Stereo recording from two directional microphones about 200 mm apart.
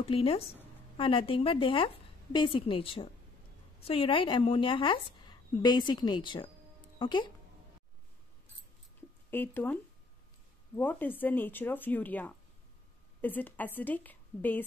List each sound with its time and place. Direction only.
0.1 s a woman's voice: 30° left (ahead or behind)
9.3 s speech: 10° left (ahead or behind)
10.8 s speech: 10° left (ahead or behind)